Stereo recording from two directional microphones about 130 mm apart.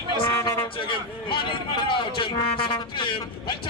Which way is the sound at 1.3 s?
40° left (ahead or behind).